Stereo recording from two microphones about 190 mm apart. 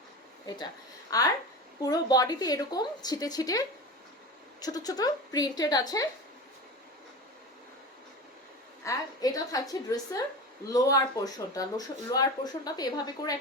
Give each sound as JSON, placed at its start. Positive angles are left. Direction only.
{"t": 0.4, "sound": "speech", "side_deg": 20}
{"t": 8.8, "sound": "speech", "side_deg": 15}